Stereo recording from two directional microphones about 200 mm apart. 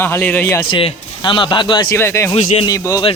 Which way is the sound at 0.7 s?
25° left (ahead or behind).